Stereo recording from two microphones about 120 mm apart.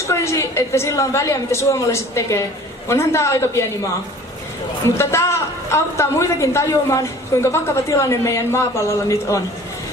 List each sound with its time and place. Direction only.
0.0 s a woman's voice: 25° left (ahead or behind)
4.8 s a woman's voice: 20° left (ahead or behind)